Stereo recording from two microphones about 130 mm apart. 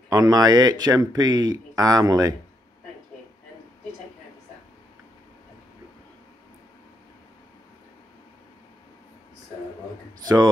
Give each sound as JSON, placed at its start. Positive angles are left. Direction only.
{"t": 0.1, "sound": "speech", "side_deg": -30}
{"t": 10.2, "sound": "speech", "side_deg": -30}